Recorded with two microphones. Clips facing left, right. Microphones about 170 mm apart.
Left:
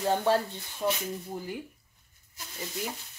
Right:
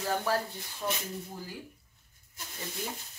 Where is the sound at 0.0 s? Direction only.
25° left (ahead or behind).